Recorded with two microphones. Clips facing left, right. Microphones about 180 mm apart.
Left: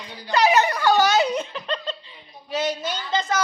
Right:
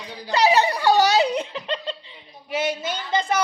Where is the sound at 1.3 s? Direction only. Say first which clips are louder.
Right 1 dB; 20° right (ahead or behind).